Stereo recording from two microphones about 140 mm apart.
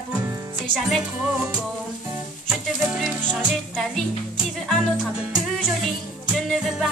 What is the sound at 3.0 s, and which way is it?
Music, 5° left (ahead or behind).